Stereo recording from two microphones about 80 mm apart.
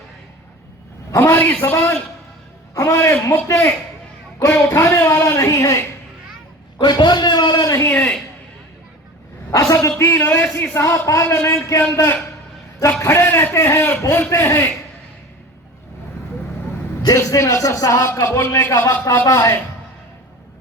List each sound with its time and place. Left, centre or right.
1.1 s a man's voice: left
2.7 s a man's voice: left
6.7 s a man's voice: left
9.5 s a man's voice: left
17.2 s a man's voice: left